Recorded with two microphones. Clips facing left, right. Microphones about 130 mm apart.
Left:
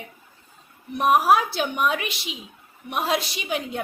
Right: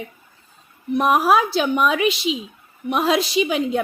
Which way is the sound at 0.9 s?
90° right.